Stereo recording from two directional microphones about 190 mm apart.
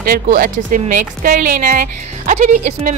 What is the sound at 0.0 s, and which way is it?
A woman's voice, 50° right (ahead or behind).